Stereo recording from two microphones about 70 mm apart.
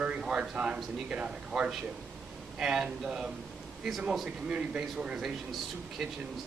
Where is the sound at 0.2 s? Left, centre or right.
Centre.